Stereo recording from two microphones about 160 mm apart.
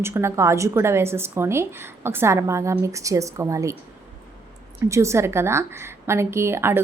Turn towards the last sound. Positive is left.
turn(degrees=-15)  # may be behind; listen again after turning